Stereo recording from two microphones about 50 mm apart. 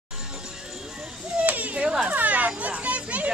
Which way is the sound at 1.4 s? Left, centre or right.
Right.